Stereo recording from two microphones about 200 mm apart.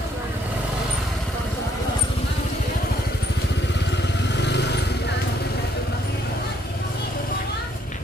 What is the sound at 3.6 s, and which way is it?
Vehicle, 60° left (ahead or behind).